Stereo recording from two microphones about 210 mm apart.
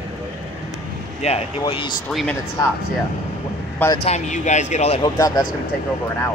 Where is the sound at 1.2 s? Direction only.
30° left (ahead or behind).